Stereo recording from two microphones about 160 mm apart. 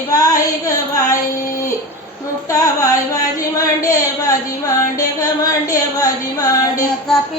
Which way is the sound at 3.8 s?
20° left (ahead or behind).